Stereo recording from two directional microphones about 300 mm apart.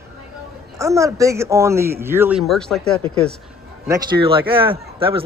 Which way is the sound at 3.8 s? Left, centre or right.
Centre.